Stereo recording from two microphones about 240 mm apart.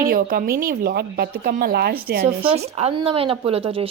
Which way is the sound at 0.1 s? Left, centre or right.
Right.